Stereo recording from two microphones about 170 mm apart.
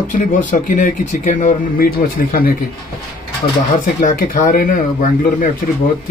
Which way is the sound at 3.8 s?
50° left (ahead or behind).